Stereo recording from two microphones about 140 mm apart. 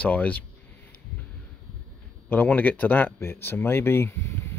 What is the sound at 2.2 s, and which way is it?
Speech, 10° left (ahead or behind).